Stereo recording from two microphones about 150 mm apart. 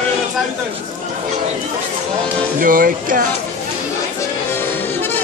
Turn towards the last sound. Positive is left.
turn(degrees=-65)  # may be behind; listen again after turning